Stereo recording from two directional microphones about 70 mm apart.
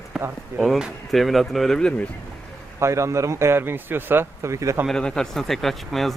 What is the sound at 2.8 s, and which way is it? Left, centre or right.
A man's voice, right.